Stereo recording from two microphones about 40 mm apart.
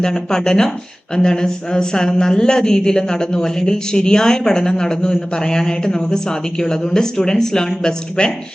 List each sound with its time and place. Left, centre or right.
0.0 s speech: centre